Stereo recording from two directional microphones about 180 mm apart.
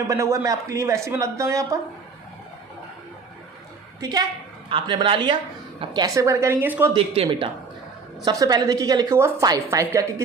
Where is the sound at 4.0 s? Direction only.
20° right (ahead or behind).